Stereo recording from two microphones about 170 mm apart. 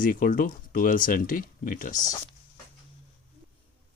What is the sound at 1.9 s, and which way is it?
Speech, 20° left (ahead or behind).